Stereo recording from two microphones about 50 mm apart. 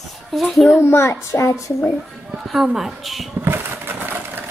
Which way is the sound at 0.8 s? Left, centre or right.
Left.